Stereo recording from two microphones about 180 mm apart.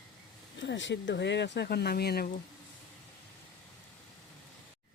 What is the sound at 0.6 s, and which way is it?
Speech, 90° left.